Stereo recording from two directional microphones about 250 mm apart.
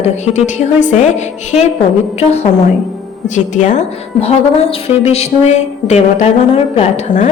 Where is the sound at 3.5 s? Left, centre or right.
Left.